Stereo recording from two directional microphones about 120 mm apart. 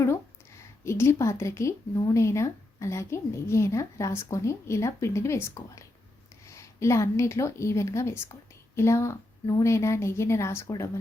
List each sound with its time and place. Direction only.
0.9 s a woman's voice: 25° left (ahead or behind)